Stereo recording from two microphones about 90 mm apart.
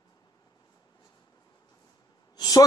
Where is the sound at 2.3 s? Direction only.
45° left (ahead or behind).